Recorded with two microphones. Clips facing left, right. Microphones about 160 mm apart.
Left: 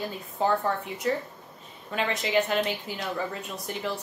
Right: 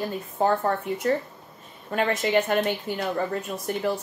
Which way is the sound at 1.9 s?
50° right (ahead or behind).